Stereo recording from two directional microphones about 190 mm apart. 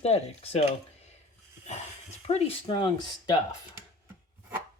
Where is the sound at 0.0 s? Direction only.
35° left (ahead or behind).